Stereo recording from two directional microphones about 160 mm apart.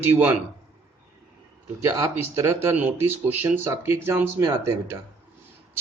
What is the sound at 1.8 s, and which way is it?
Speech, 20° right (ahead or behind).